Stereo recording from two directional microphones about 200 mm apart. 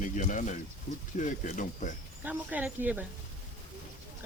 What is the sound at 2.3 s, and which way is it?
Speech, 10° right (ahead or behind).